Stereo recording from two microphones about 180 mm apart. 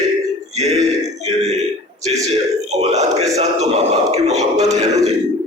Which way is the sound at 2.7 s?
40° right (ahead or behind).